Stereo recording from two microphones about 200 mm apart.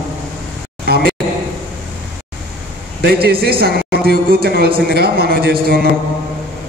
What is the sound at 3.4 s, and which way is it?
A man's voice, 50° right (ahead or behind).